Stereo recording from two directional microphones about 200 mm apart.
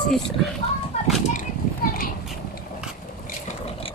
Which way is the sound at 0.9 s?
30° left (ahead or behind).